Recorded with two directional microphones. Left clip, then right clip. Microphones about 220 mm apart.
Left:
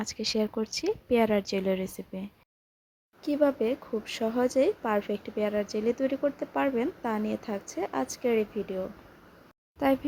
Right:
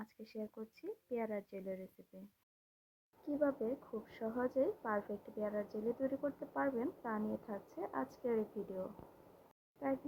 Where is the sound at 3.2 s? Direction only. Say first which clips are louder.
Left 12 dB; 35° left (ahead or behind).